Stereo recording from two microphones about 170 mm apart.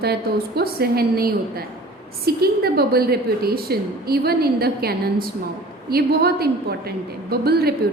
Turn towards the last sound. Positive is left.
turn(degrees=-65)  # may be behind; listen again after turning